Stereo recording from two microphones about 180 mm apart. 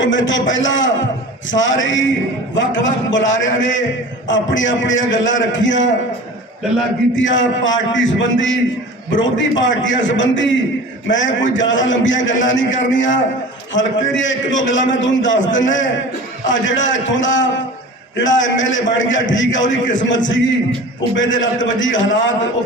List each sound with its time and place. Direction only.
0.0 s a man's voice: 90° left
7.2 s a man's voice: 90° left